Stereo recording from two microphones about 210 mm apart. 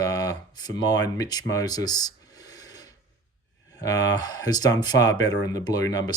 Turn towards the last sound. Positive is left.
turn(degrees=15)  # may be behind; listen again after turning